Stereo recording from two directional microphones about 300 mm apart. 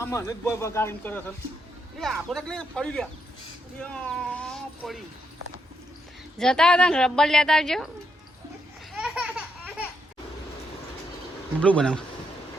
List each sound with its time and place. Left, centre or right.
0.0 s a woman's voice: centre
6.4 s a woman's voice: centre
9.0 s a sound: centre
11.6 s a woman's voice: centre